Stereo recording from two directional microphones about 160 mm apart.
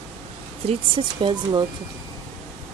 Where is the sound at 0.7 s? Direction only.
30° right (ahead or behind).